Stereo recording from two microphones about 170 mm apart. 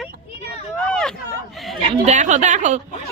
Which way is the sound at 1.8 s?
45° right (ahead or behind).